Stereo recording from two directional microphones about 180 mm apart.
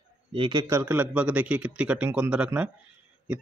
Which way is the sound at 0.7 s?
10° right (ahead or behind).